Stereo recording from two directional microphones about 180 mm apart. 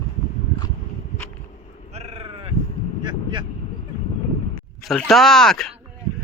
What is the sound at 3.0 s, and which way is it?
Vehicle, 25° right (ahead or behind).